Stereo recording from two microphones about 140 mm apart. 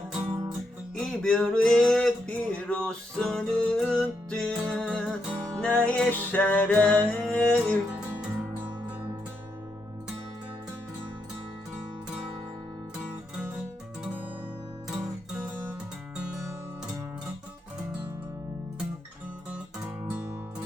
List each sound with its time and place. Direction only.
0.9 s male singing: 5° left (ahead or behind)
20.1 s music: 15° right (ahead or behind)